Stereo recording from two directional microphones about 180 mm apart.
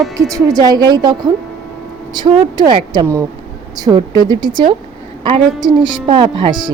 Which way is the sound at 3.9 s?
5° right (ahead or behind).